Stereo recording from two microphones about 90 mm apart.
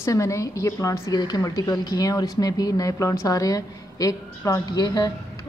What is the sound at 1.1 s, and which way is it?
Speech, 50° left (ahead or behind).